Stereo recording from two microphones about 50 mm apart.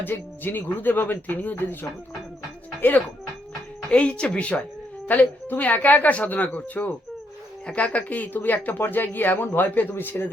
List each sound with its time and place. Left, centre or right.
0.0 s speech: left
3.9 s speech: left
5.0 s speech: left